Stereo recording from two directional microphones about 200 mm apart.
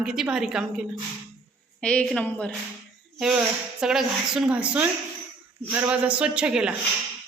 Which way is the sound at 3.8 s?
5° right (ahead or behind).